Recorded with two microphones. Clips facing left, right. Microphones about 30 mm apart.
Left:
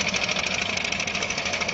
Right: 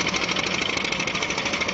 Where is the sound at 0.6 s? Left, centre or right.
Right.